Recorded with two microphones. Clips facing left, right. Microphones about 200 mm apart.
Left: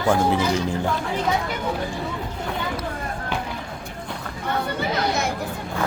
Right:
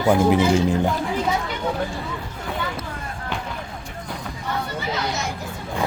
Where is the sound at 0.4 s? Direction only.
30° right (ahead or behind).